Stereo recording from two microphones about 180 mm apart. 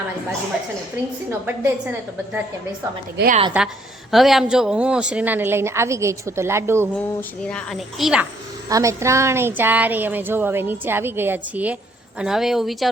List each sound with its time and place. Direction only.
1.3 s speech: 10° right (ahead or behind)
3.2 s speech: 70° right (ahead or behind)
3.6 s speech: 10° right (ahead or behind)
7.2 s a woman's voice: 5° left (ahead or behind)
8.7 s a woman's voice: 15° right (ahead or behind); by 12.9 s centre (ahead or behind)